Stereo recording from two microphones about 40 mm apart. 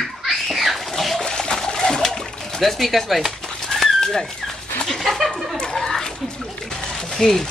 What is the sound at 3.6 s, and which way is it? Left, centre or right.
Dog, centre.